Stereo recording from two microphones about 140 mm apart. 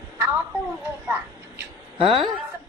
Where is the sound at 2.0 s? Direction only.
40° right (ahead or behind).